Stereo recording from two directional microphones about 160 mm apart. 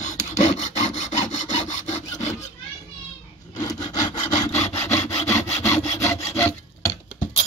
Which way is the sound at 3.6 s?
25° left (ahead or behind).